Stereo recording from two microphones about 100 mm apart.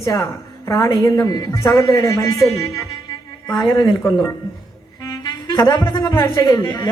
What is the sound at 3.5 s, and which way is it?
Speech, 45° left (ahead or behind).